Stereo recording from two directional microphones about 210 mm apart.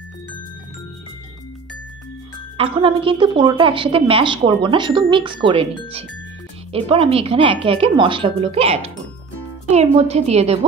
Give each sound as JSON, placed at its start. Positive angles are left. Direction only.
{"t": 2.5, "sound": "a woman's voice", "side_deg": -25}